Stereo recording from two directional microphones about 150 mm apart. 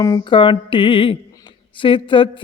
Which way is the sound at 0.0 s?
30° left (ahead or behind).